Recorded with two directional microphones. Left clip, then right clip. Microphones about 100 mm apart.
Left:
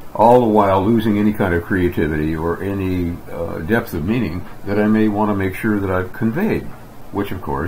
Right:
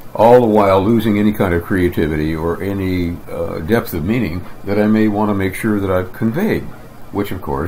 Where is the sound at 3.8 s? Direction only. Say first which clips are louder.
Right 2 dB; 40° right (ahead or behind).